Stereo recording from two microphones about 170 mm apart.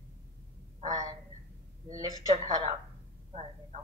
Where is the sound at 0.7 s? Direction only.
45° right (ahead or behind).